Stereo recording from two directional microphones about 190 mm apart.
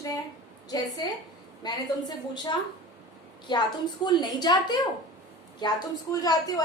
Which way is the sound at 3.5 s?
20° left (ahead or behind).